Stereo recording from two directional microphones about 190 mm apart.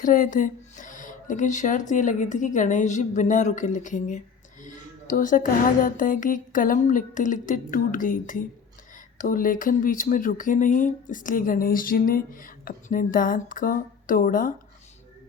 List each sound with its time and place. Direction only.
0.0 s speech: 45° left (ahead or behind)